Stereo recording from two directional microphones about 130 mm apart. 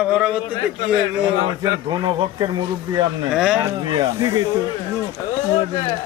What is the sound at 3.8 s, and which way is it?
Speech, 35° right (ahead or behind).